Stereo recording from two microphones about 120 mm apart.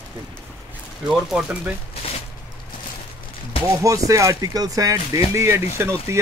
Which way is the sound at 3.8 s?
25° right (ahead or behind).